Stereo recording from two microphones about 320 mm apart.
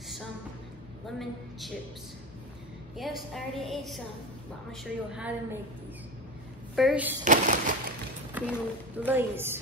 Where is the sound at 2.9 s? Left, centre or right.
Centre.